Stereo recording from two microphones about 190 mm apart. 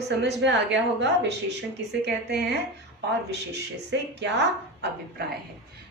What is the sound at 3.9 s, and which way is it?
Speech, 65° right (ahead or behind).